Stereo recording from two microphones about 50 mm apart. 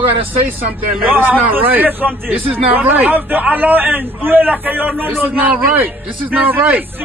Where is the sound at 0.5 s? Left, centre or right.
Right.